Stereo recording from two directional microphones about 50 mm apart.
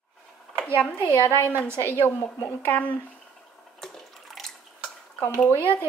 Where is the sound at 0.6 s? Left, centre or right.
Left.